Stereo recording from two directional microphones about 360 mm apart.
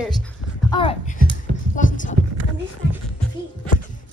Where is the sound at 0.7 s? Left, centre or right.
Centre.